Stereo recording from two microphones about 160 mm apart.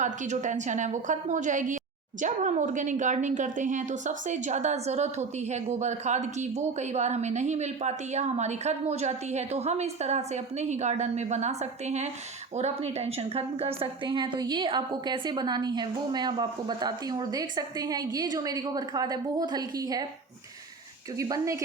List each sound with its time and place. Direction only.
0.0 s a woman's voice: 50° right (ahead or behind); by 20.1 s 25° right (ahead or behind)
21.2 s a woman's voice: 20° right (ahead or behind)